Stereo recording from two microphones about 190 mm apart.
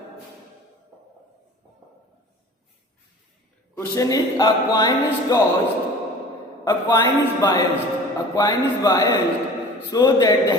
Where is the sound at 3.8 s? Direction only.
15° left (ahead or behind).